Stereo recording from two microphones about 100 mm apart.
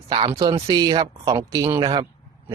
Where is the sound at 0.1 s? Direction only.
65° right (ahead or behind).